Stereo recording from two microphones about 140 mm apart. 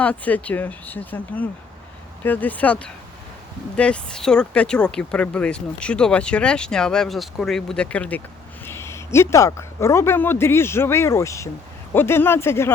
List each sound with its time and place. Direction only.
0.0 s speech: 10° left (ahead or behind)